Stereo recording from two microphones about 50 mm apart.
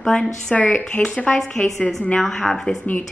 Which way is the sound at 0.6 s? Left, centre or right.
Left.